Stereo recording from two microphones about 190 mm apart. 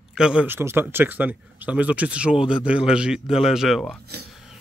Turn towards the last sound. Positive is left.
turn(degrees=0)  # may be behind; listen again after turning